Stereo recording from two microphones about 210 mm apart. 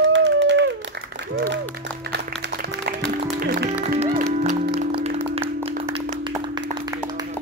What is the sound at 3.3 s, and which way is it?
Music, 40° right (ahead or behind).